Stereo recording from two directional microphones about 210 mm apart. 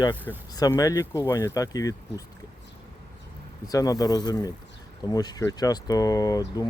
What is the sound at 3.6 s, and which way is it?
Speech, 15° left (ahead or behind).